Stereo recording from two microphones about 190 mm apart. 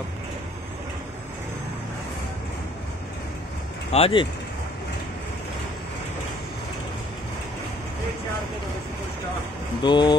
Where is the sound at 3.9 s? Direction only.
30° left (ahead or behind).